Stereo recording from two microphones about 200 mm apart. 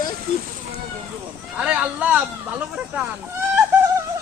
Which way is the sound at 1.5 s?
5° right (ahead or behind).